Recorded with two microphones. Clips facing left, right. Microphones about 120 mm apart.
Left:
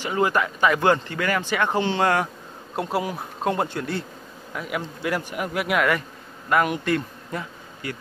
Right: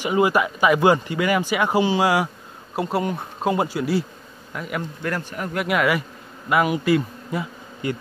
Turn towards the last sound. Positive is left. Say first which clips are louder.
# right 7 dB
turn(degrees=-20)  # may be behind; listen again after turning